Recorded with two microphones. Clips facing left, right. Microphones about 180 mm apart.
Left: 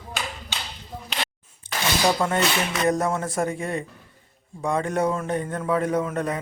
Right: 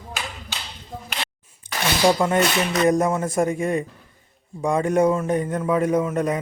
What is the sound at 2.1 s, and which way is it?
A man's voice, 10° right (ahead or behind).